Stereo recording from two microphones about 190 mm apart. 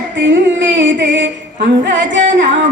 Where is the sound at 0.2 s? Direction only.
75° right (ahead or behind).